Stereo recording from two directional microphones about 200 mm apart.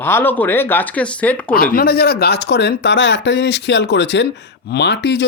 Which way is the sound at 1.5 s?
45° left (ahead or behind).